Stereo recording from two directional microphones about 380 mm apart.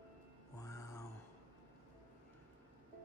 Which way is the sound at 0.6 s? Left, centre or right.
Centre.